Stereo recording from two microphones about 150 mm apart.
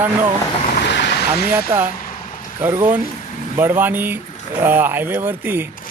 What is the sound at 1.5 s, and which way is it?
Speech, 15° right (ahead or behind).